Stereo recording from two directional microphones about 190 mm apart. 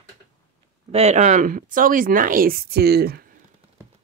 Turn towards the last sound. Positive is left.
turn(degrees=-55)  # may be behind; listen again after turning